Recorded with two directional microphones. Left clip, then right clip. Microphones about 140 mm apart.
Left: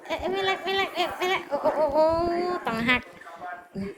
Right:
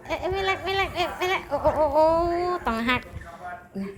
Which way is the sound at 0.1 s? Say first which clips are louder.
Right 1 dB; 25° right (ahead or behind).